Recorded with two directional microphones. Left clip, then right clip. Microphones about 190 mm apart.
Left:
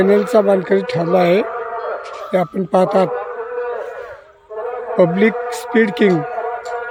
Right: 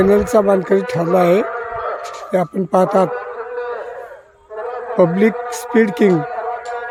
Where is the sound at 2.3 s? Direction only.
5° right (ahead or behind).